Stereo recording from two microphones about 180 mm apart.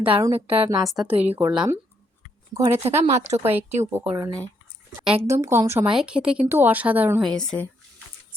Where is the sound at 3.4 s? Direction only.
10° right (ahead or behind).